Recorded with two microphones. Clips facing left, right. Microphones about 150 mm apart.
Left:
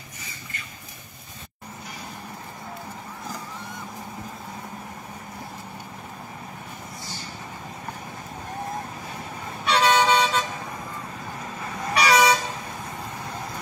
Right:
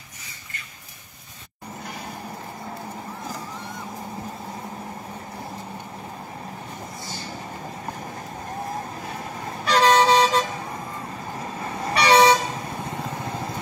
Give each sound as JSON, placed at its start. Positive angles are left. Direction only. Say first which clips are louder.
{"t": 9.7, "sound": "vehicle", "louder": "right 3 dB", "side_deg": -35}
{"t": 11.6, "sound": "vehicle", "louder": "right 1 dB", "side_deg": -30}